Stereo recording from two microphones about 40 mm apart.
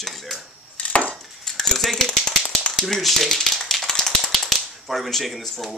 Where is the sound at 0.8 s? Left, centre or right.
Left.